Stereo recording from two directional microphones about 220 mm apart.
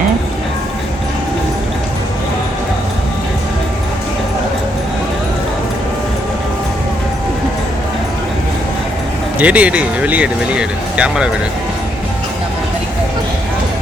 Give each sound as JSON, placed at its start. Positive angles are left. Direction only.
{"t": 9.4, "sound": "speech", "side_deg": -5}